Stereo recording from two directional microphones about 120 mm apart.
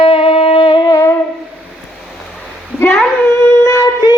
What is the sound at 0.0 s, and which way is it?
Wind instrument, 50° left (ahead or behind).